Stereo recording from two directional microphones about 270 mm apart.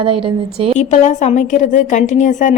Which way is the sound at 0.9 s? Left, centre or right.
Left.